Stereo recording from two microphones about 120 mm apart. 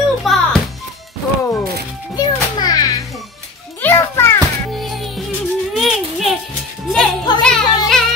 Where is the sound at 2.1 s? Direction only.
35° left (ahead or behind).